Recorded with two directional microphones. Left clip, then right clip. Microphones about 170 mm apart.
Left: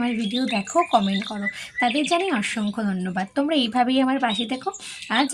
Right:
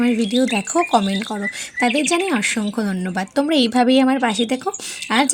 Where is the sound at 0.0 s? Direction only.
45° right (ahead or behind).